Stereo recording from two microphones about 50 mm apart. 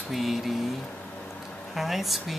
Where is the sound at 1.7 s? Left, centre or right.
Centre.